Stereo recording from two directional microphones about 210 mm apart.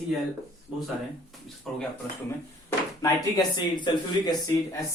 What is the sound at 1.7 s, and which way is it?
Speech, centre (ahead or behind).